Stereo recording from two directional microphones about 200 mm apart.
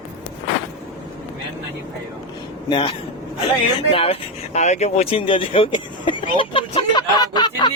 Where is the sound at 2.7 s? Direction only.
25° left (ahead or behind).